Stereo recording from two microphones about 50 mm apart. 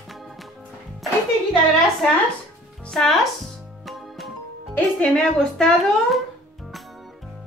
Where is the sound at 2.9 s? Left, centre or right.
Centre.